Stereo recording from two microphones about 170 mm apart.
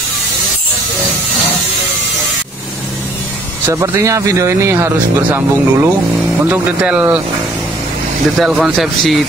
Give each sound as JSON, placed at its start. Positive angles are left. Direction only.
{"t": 3.6, "sound": "speech", "side_deg": -15}
{"t": 8.4, "sound": "speech", "side_deg": -5}